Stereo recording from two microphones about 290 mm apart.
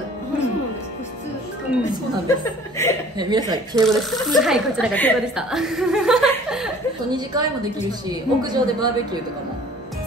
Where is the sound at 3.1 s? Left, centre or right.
Centre.